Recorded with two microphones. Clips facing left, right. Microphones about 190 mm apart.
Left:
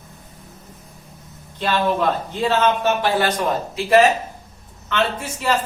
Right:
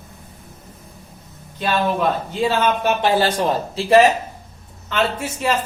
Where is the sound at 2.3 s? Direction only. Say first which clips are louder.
Left 1 dB; 10° right (ahead or behind).